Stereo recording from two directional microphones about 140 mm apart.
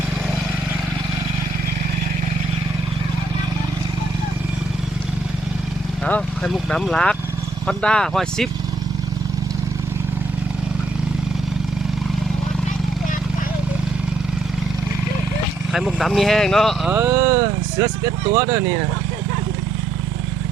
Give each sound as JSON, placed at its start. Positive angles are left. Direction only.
{"t": 6.1, "sound": "speech", "side_deg": 5}
{"t": 15.7, "sound": "speech", "side_deg": 0}
{"t": 17.1, "sound": "speech", "side_deg": -25}